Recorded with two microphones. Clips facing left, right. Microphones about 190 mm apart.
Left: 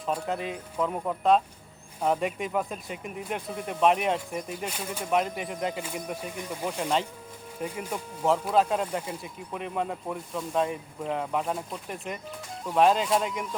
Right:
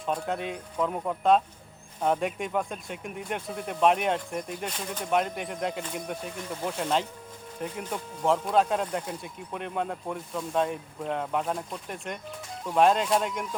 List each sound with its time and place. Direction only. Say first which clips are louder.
0.0 s speech: even; centre (ahead or behind)
6.7 s speech: even; centre (ahead or behind)